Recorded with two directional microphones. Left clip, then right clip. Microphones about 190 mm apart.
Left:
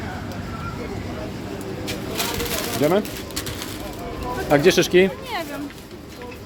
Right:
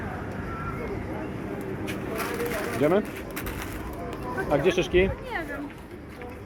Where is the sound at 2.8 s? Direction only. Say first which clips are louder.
Left 3 dB; 15° left (ahead or behind).